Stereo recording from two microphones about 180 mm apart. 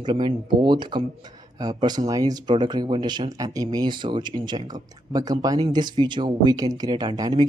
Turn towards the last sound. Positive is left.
turn(degrees=-25)  # may be behind; listen again after turning